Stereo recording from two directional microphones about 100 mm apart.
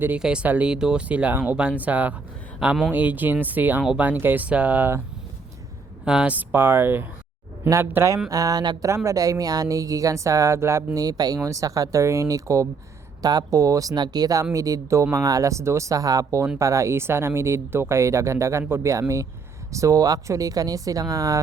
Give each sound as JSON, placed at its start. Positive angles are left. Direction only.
{"t": 0.2, "sound": "speech", "side_deg": -10}
{"t": 6.1, "sound": "speech", "side_deg": -5}
{"t": 6.3, "sound": "speech", "side_deg": -20}
{"t": 10.9, "sound": "speech", "side_deg": -40}